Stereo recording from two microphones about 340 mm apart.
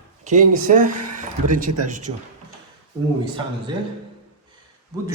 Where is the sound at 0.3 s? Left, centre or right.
Right.